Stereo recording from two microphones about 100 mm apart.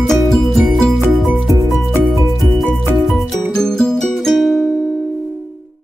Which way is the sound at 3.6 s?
5° left (ahead or behind).